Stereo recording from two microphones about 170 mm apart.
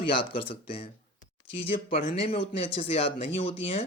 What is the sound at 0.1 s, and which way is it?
Speech, 30° left (ahead or behind).